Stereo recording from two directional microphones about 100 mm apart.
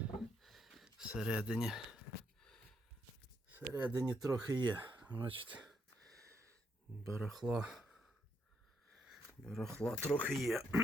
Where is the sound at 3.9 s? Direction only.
35° right (ahead or behind); by 5.5 s 60° right (ahead or behind).